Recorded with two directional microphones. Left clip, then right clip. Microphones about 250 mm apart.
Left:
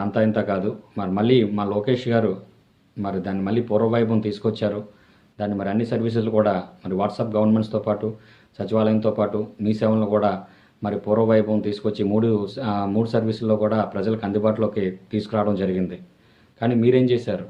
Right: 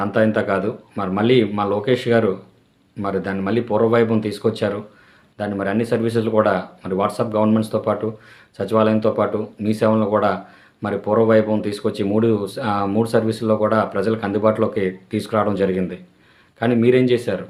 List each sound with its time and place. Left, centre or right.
0.0 s speech: centre